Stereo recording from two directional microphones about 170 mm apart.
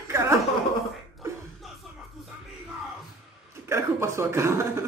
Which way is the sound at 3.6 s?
15° right (ahead or behind).